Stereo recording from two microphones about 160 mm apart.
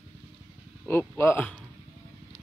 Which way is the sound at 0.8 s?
10° left (ahead or behind).